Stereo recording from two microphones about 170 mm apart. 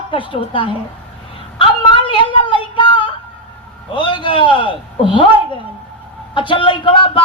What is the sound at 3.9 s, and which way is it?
A woman's voice, 30° left (ahead or behind).